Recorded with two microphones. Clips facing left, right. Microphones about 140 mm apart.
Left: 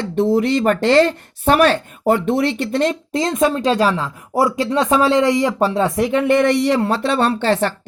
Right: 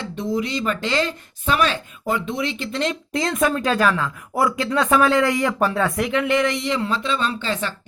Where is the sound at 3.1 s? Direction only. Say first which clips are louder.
Left 4 dB; 25° left (ahead or behind); by 7.7 s 65° left (ahead or behind).